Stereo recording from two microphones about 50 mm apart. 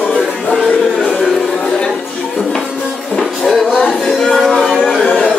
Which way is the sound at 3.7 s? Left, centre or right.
Centre.